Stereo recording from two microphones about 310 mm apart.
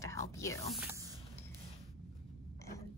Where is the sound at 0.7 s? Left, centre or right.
Centre.